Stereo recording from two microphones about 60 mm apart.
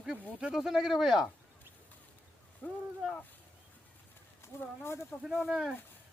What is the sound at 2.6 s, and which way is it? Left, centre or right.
Speech, left.